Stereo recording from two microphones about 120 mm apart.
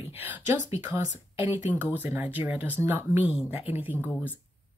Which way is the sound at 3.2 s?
55° left (ahead or behind).